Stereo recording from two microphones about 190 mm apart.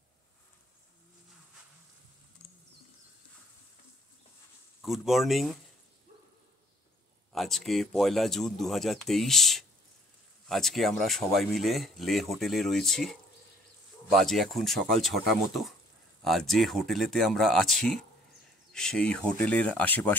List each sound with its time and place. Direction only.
4.8 s speech: centre (ahead or behind)
7.3 s speech: centre (ahead or behind)
16.3 s speech: centre (ahead or behind)